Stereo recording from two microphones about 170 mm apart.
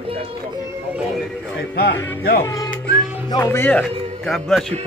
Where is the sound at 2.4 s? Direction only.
20° left (ahead or behind).